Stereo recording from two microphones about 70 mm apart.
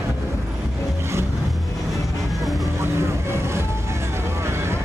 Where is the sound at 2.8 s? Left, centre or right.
Right.